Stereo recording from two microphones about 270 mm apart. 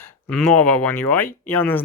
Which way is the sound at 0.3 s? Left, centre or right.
Centre.